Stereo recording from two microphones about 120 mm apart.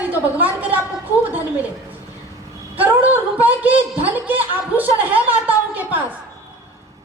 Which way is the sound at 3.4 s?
15° right (ahead or behind).